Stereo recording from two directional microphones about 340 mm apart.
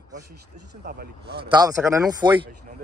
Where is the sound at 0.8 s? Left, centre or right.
Right.